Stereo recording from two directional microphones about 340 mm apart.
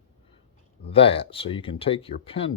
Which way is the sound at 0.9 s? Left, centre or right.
Centre.